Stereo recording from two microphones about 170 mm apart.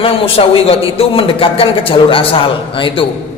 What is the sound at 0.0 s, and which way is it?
A man's voice, 35° left (ahead or behind).